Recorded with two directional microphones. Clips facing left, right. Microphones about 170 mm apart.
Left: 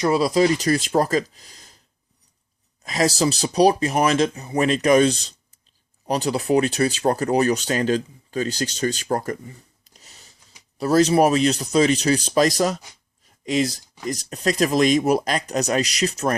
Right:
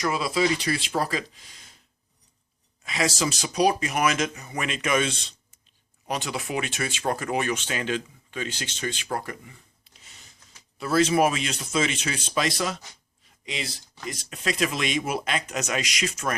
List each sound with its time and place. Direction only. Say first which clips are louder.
0.0 s speech: left 7 dB; 35° left (ahead or behind)
2.8 s speech: left 6 dB; 40° left (ahead or behind)